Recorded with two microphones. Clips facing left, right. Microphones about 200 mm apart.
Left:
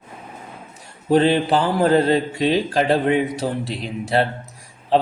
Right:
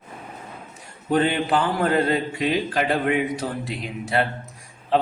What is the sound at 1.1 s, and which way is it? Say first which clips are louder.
Speech: left 4 dB; 30° left (ahead or behind).